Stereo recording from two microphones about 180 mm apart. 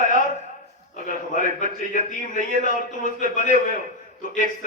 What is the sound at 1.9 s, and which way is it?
A man's voice, 45° left (ahead or behind).